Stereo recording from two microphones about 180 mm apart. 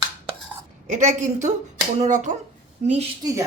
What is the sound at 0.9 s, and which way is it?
Speech, 40° right (ahead or behind).